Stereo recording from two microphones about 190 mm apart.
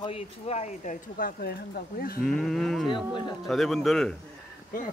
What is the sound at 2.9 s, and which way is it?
Speech, 25° left (ahead or behind).